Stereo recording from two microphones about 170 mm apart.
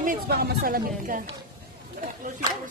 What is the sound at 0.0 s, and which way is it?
Speech, 60° right (ahead or behind).